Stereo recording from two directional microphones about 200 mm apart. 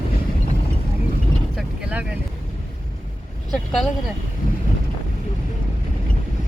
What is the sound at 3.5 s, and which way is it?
Vehicle, centre (ahead or behind).